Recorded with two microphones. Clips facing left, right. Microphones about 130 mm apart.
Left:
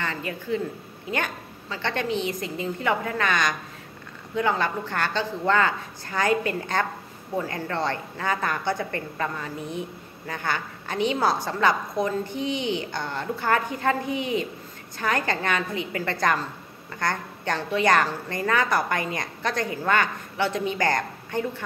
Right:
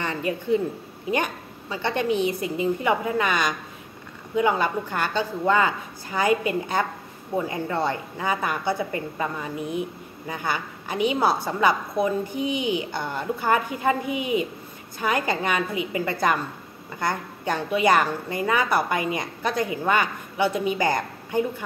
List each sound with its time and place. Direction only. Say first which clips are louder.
0.0 s a woman's voice: right 4 dB; 20° right (ahead or behind)